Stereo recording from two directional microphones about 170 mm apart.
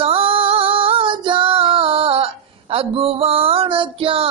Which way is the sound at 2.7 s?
35° right (ahead or behind).